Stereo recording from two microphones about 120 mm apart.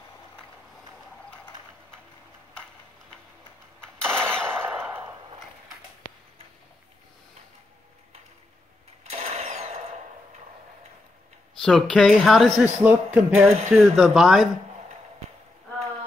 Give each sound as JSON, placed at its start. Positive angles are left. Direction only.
{"t": 4.1, "sound": "machine gun", "side_deg": -20}
{"t": 9.1, "sound": "sewing machine", "side_deg": -65}
{"t": 11.6, "sound": "a woman's voice", "side_deg": 5}
{"t": 12.6, "sound": "a woman's voice", "side_deg": -10}